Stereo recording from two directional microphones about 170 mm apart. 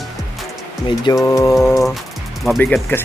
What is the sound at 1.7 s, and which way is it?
Speech, centre (ahead or behind).